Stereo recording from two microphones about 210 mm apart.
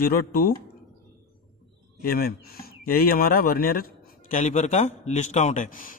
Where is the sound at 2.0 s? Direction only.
45° left (ahead or behind).